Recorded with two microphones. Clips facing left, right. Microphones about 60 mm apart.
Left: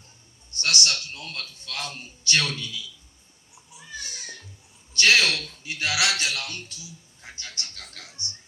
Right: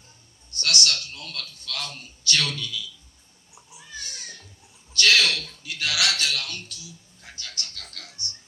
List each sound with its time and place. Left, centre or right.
0.5 s a man's voice: left
4.9 s a man's voice: left